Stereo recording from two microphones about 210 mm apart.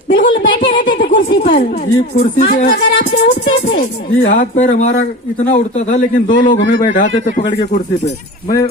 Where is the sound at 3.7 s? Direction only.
55° left (ahead or behind).